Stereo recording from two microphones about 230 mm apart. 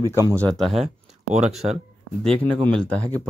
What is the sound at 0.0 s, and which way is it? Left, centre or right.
Speech, centre.